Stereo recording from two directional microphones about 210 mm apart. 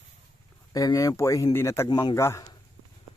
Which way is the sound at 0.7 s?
15° left (ahead or behind).